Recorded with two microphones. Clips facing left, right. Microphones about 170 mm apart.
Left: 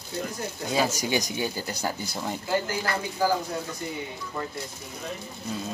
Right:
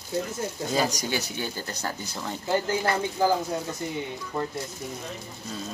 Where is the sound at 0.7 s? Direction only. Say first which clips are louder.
Left 2 dB; 10° left (ahead or behind).